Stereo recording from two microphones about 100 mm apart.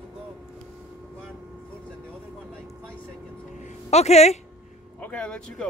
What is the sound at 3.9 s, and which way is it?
Speech, 90° left.